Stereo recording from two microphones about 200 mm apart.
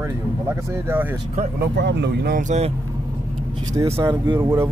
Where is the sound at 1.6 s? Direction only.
60° right (ahead or behind); by 2.7 s 35° right (ahead or behind).